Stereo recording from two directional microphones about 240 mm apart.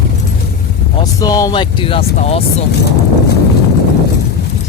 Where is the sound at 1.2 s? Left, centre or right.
Centre.